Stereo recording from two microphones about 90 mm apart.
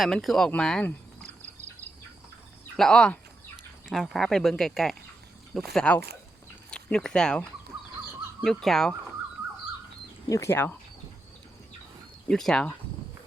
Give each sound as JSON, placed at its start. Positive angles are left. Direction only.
{"t": 0.0, "sound": "speech", "side_deg": 0}
{"t": 2.7, "sound": "speech", "side_deg": 10}
{"t": 3.8, "sound": "speech", "side_deg": 0}
{"t": 8.4, "sound": "speech", "side_deg": 5}
{"t": 10.2, "sound": "speech", "side_deg": 40}
{"t": 10.5, "sound": "speech", "side_deg": 25}
{"t": 12.3, "sound": "speech", "side_deg": 5}